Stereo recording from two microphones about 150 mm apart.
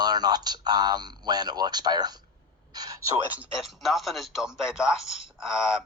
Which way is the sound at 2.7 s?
25° right (ahead or behind).